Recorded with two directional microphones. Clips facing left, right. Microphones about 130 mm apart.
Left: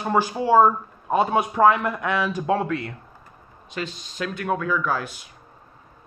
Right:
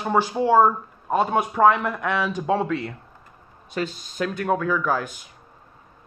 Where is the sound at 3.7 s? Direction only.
40° right (ahead or behind).